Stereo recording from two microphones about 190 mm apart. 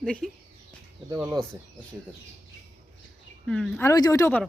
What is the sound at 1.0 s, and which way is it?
Speech, 20° right (ahead or behind).